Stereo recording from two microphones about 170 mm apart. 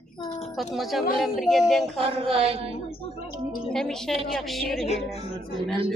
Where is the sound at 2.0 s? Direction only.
35° right (ahead or behind).